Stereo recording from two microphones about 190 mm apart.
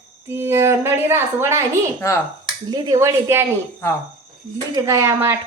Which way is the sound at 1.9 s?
15° left (ahead or behind).